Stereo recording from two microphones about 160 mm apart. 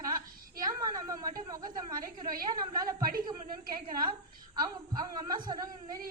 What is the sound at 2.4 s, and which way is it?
Speech, 25° right (ahead or behind).